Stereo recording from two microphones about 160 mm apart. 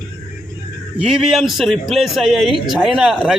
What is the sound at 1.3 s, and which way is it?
Speech, centre (ahead or behind).